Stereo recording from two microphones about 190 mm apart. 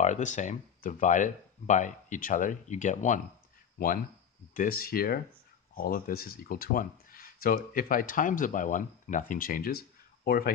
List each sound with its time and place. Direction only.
0.0 s speech: 40° left (ahead or behind)